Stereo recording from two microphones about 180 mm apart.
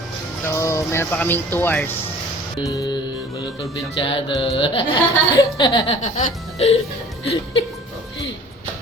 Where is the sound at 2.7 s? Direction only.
20° left (ahead or behind).